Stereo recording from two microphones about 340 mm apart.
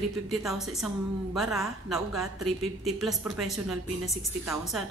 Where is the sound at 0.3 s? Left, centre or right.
Centre.